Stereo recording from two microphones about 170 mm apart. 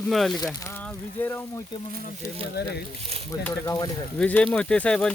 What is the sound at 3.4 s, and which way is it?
Speech, 15° left (ahead or behind).